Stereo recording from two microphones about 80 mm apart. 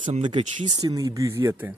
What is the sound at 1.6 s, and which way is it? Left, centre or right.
Speech, right.